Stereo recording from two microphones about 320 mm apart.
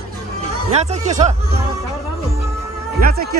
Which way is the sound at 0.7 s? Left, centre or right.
Right.